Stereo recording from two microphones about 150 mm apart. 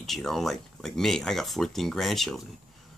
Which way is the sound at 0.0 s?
Centre (ahead or behind).